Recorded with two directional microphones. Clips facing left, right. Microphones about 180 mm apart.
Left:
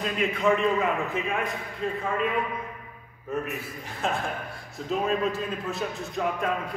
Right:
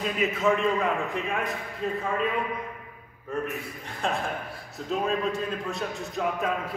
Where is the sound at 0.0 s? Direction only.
5° right (ahead or behind).